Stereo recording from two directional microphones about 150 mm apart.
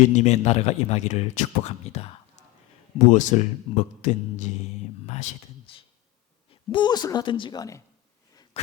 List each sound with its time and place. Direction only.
0.0 s a man's voice: 50° left (ahead or behind)
6.5 s speech: 35° left (ahead or behind)
8.6 s a sound: 40° left (ahead or behind)